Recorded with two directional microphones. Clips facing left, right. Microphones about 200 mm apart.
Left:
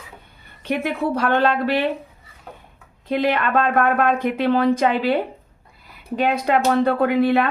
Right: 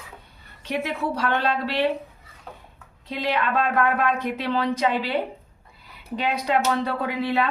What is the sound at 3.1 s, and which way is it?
Speech, 55° left (ahead or behind).